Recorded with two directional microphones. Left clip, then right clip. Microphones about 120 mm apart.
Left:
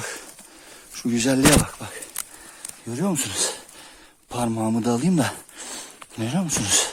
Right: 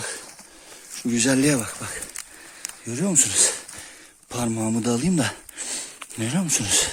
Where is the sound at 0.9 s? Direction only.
35° left (ahead or behind).